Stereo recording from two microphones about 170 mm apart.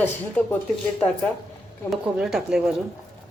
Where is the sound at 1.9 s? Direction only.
5° right (ahead or behind).